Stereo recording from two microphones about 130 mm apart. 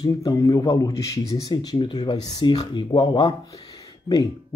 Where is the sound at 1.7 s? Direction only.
40° left (ahead or behind).